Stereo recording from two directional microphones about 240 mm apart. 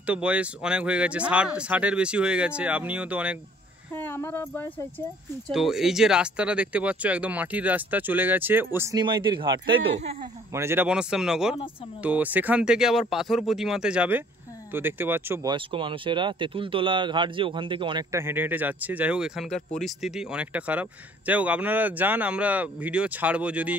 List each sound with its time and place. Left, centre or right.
0.0 s speech: centre
3.9 s speech: centre